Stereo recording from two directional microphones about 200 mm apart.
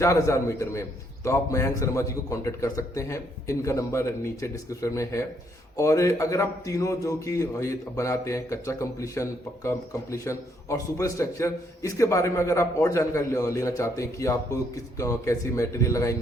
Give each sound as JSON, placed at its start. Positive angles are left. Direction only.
{"t": 0.0, "sound": "a man's voice", "side_deg": 15}